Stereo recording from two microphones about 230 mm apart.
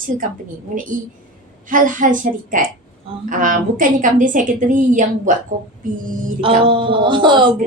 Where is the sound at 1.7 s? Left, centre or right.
Right.